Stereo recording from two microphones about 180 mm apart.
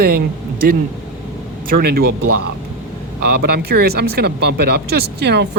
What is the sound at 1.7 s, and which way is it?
Speech, 60° right (ahead or behind).